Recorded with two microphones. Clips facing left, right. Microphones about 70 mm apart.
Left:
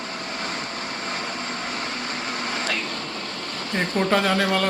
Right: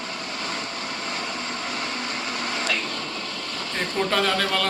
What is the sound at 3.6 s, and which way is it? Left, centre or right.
Speech, left.